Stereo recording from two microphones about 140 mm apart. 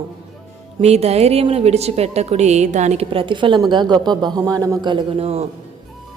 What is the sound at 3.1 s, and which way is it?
A woman's voice, 40° right (ahead or behind).